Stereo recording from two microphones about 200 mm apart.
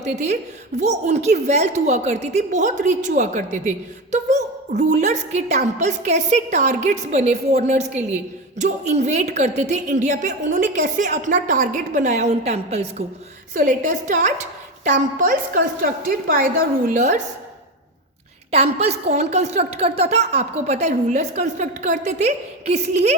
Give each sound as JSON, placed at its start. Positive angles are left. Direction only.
{"t": 0.0, "sound": "a woman's voice", "side_deg": -35}
{"t": 18.5, "sound": "a woman's voice", "side_deg": -30}